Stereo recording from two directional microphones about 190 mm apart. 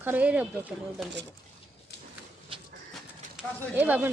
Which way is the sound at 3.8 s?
10° right (ahead or behind).